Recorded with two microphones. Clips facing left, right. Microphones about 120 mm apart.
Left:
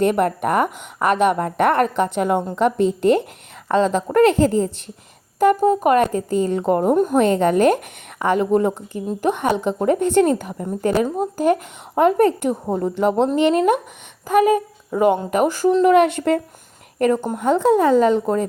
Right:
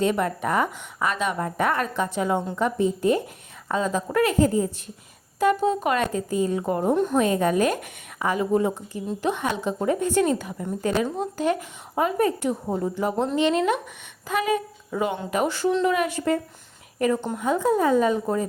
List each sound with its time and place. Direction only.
0.0 s a woman's voice: 60° left (ahead or behind)
2.6 s speech: 70° left (ahead or behind)
4.1 s speech: 60° left (ahead or behind)
5.4 s speech: 50° left (ahead or behind)
7.3 s a woman's voice: 65° left (ahead or behind)
8.9 s a woman's voice: 45° left (ahead or behind)
10.2 s speech: 50° left (ahead or behind)
11.9 s a woman's voice: 65° left (ahead or behind)
13.0 s speech: 75° left (ahead or behind)
13.2 s speech: 45° left (ahead or behind)
15.9 s a woman's voice: 65° left (ahead or behind)
17.2 s speech: 45° left (ahead or behind)
17.4 s speech: 70° left (ahead or behind)